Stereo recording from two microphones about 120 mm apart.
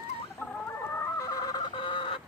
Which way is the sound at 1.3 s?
35° left (ahead or behind).